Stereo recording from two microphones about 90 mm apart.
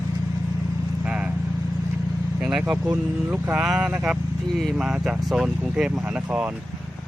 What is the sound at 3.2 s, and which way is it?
Speech, 20° right (ahead or behind).